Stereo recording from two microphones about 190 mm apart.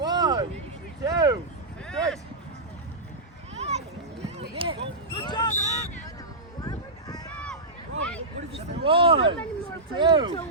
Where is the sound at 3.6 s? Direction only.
35° right (ahead or behind).